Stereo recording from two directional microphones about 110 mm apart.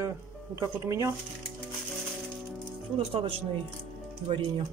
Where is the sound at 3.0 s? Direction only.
65° right (ahead or behind).